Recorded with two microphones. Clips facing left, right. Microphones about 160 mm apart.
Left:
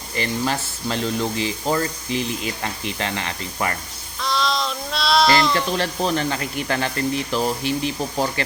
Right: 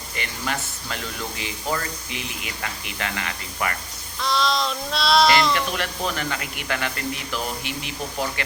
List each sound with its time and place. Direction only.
0.2 s speech: 30° left (ahead or behind)
4.2 s child singing: centre (ahead or behind)
5.5 s speech: 30° left (ahead or behind)